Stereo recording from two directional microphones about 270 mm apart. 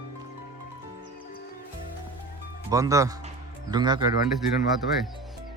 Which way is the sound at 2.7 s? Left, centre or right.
Centre.